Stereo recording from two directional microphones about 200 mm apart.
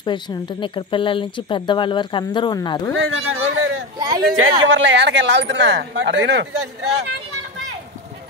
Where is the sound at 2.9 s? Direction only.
85° right.